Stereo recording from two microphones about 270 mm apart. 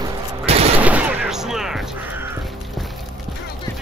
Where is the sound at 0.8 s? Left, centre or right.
Centre.